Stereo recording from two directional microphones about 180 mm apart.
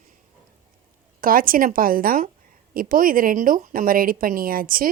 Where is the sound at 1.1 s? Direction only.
50° right (ahead or behind).